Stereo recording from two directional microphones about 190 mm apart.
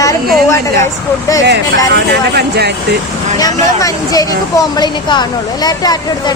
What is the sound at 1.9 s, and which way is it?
Speech, 60° right (ahead or behind).